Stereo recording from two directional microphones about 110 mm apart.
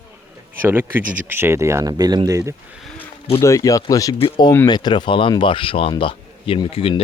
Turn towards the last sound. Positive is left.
turn(degrees=60)  # may be behind; listen again after turning